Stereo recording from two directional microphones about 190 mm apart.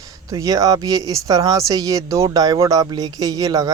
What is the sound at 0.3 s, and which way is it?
Speech, 20° right (ahead or behind).